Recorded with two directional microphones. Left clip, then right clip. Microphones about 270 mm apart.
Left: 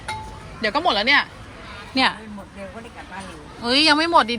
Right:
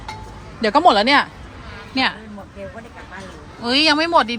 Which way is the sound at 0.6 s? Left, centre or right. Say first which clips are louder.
Right 6 dB; centre.